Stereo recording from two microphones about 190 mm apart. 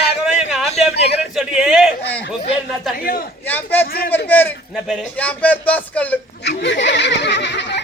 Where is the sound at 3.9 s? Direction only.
50° left (ahead or behind).